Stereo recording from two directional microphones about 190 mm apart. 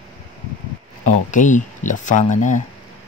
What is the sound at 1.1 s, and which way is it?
Speech, 40° left (ahead or behind).